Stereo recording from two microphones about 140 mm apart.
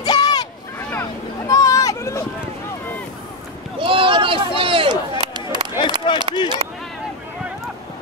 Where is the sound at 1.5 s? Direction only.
25° left (ahead or behind).